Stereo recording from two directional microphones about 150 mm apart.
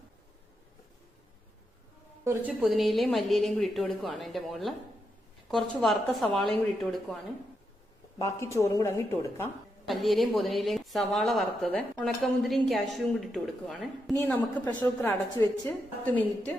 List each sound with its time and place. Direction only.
2.5 s a woman's voice: centre (ahead or behind)
8.2 s a woman's voice: 20° left (ahead or behind)
9.8 s a woman's voice: centre (ahead or behind)